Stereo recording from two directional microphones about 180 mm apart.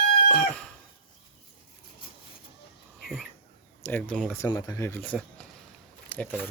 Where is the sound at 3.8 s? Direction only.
10° left (ahead or behind).